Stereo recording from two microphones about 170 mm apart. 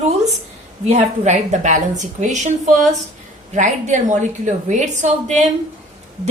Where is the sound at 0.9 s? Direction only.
45° right (ahead or behind).